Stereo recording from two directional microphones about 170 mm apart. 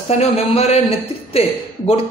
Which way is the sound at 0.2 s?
35° left (ahead or behind).